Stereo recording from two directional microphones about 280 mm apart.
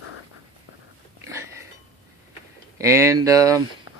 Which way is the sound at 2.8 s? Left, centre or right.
Centre.